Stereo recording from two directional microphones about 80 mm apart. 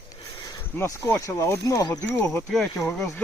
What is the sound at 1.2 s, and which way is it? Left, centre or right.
Speech, left.